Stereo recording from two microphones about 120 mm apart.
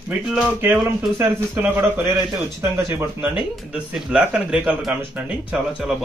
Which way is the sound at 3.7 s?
10° right (ahead or behind).